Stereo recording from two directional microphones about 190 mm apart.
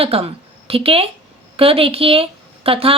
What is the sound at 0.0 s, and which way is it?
A woman's voice, 30° right (ahead or behind).